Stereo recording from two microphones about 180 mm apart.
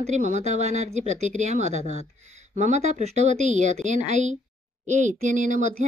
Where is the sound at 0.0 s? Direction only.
40° right (ahead or behind).